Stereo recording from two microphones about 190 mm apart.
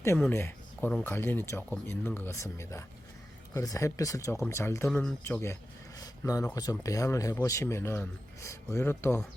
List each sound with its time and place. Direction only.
0.2 s speech: 10° left (ahead or behind)